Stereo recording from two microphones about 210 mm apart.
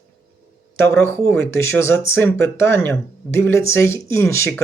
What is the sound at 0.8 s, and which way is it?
Speech, 10° left (ahead or behind).